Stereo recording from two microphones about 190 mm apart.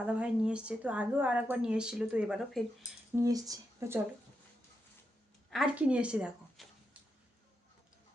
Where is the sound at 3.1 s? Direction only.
15° right (ahead or behind).